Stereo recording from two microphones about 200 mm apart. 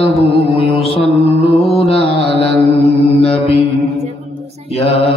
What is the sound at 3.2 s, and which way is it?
Mantra, 30° left (ahead or behind).